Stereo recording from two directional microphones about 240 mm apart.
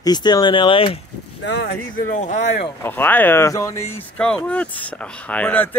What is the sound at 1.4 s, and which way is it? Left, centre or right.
Speech, left.